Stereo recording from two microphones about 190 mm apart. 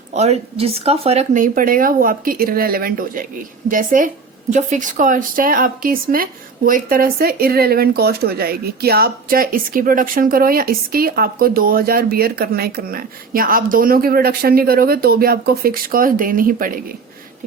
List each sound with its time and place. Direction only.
0.1 s speech: 35° right (ahead or behind)